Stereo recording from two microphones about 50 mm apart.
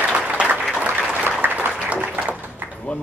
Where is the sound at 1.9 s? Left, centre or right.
Right.